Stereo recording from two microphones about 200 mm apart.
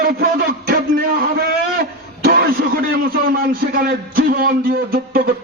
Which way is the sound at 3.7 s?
45° right (ahead or behind).